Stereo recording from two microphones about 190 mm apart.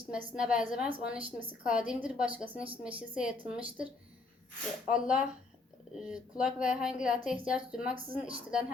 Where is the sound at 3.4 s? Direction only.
30° right (ahead or behind).